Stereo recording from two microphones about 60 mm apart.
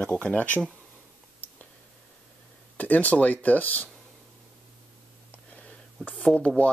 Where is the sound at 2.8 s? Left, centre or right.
Left.